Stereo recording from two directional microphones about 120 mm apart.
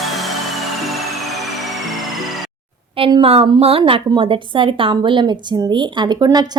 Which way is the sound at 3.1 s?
50° right (ahead or behind).